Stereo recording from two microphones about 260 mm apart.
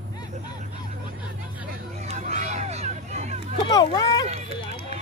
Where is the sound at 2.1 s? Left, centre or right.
Right.